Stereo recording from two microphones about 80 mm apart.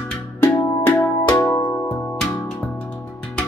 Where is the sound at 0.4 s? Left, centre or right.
Left.